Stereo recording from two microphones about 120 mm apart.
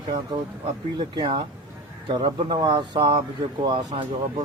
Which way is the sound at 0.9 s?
45° right (ahead or behind).